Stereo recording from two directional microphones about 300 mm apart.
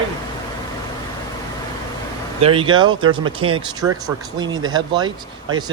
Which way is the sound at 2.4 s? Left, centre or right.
Centre.